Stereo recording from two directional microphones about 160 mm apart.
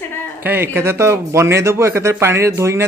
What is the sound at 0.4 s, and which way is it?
Speech, 15° right (ahead or behind).